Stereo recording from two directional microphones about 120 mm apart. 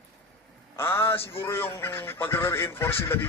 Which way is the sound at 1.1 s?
50° left (ahead or behind).